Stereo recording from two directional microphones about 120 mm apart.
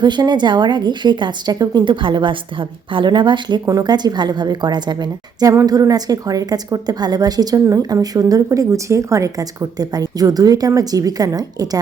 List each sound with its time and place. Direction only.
0.0 s speech: 35° right (ahead or behind)